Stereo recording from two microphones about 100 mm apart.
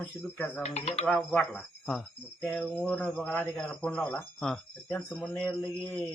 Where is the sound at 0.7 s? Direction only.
90° left.